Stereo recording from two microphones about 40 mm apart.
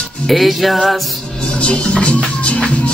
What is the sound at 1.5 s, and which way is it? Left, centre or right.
Speech, left.